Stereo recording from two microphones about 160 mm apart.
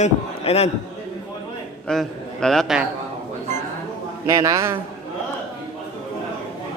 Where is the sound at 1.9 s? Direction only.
5° left (ahead or behind).